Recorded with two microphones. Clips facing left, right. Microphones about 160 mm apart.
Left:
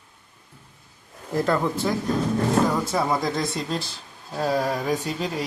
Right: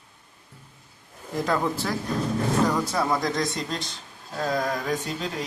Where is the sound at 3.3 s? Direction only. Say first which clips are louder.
Left 1 dB; 30° left (ahead or behind).